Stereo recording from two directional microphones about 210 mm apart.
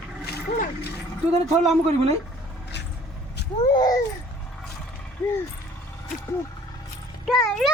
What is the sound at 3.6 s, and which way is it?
Speech, 20° left (ahead or behind).